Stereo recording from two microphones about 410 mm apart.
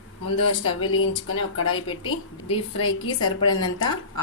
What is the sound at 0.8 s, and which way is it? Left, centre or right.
Speech, left.